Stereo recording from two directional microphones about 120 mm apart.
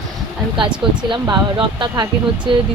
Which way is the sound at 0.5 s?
45° right (ahead or behind).